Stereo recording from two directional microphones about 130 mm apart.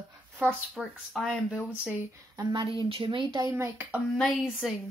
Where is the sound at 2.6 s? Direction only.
45° right (ahead or behind); by 4.0 s 20° right (ahead or behind).